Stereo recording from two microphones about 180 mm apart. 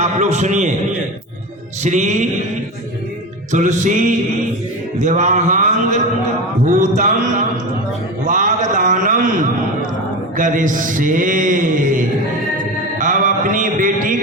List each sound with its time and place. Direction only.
0.0 s mantra: 40° right (ahead or behind)
1.8 s mantra: 40° right (ahead or behind)
3.5 s speech: 45° right (ahead or behind)
4.9 s mantra: 40° right (ahead or behind)
6.7 s a man's voice: 45° right (ahead or behind)
13.0 s mantra: 45° right (ahead or behind)